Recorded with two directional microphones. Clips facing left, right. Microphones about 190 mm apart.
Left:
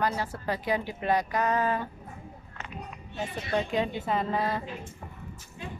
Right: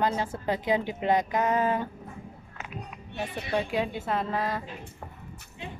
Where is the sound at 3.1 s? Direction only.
60° right (ahead or behind).